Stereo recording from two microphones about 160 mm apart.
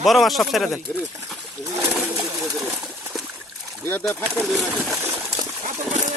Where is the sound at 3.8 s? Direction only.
15° left (ahead or behind).